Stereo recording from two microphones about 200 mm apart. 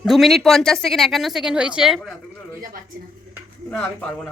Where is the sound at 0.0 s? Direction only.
Centre (ahead or behind).